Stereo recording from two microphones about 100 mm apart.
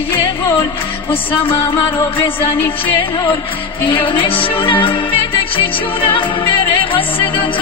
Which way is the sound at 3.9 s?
55° left (ahead or behind).